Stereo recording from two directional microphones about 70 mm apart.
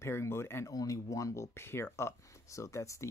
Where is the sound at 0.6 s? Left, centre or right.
Left.